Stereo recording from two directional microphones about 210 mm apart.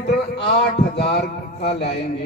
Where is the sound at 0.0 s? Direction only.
50° left (ahead or behind).